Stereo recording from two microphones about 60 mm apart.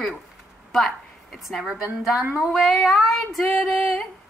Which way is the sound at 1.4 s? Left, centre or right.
Centre.